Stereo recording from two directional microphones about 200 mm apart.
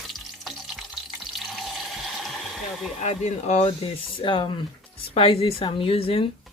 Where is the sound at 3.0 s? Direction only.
35° left (ahead or behind).